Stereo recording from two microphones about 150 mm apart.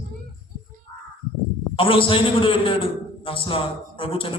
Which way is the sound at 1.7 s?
35° left (ahead or behind).